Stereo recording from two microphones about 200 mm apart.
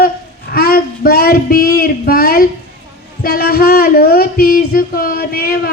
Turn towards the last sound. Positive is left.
turn(degrees=50)  # may be behind; listen again after turning